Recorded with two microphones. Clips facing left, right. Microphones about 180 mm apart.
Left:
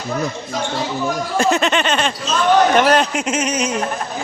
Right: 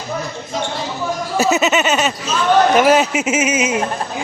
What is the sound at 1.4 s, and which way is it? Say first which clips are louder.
Speech: right 2 dB; 5° right (ahead or behind).